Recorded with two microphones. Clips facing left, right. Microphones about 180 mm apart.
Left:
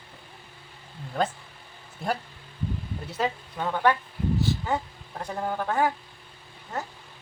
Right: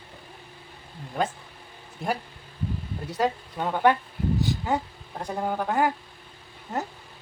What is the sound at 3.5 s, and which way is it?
Speech, 15° right (ahead or behind).